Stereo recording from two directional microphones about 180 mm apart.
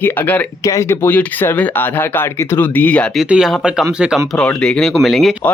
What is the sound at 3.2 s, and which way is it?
Speech, 5° right (ahead or behind).